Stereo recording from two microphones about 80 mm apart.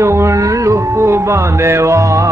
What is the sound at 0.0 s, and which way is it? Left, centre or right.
Music, right.